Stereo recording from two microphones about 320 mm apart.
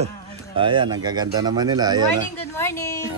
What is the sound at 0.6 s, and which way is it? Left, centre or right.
Cutlery, centre.